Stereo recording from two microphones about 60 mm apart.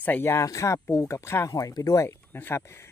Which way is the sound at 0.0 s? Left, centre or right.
Left.